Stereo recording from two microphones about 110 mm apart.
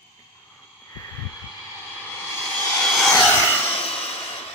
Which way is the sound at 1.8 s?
15° left (ahead or behind).